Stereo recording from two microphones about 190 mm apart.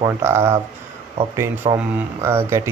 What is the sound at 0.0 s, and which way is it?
Speech, 15° right (ahead or behind).